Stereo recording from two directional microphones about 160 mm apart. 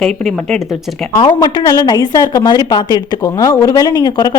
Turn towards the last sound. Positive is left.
turn(degrees=25)  # may be behind; listen again after turning